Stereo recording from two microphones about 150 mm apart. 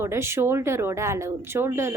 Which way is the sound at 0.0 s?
15° right (ahead or behind).